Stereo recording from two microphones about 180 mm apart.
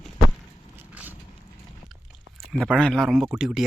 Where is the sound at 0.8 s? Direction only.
10° right (ahead or behind).